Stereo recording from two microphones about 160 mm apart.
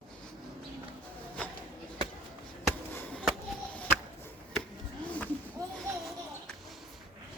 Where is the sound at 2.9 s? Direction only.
15° left (ahead or behind).